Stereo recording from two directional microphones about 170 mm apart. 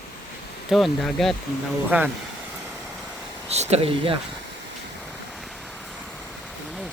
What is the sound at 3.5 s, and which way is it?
Speech, 40° right (ahead or behind).